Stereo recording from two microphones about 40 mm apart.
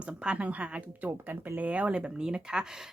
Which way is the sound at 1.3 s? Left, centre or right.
Right.